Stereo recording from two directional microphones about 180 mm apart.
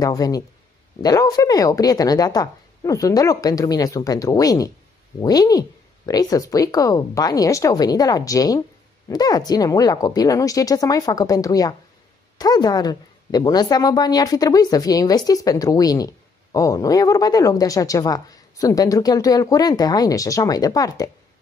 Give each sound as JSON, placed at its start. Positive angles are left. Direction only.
{"t": 0.0, "sound": "a woman's voice", "side_deg": 20}